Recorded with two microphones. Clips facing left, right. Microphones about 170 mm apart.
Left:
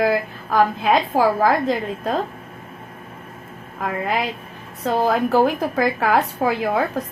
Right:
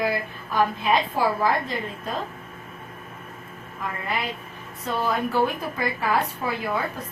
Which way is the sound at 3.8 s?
90° left.